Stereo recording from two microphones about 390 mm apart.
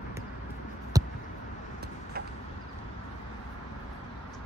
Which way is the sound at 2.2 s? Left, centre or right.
Right.